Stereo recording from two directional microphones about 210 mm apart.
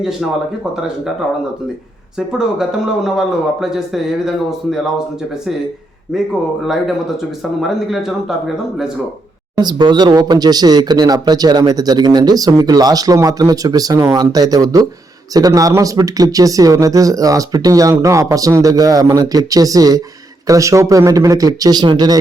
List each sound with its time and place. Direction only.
2.1 s speech: 5° right (ahead or behind)
6.1 s speech: centre (ahead or behind)
7.7 s speech: centre (ahead or behind)
9.6 s speech: 20° right (ahead or behind)